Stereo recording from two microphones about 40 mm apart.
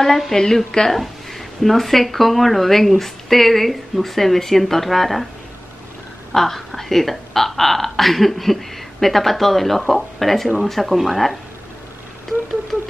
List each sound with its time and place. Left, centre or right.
0.0 s a woman's voice: centre
0.9 s speech: centre
6.3 s speech: centre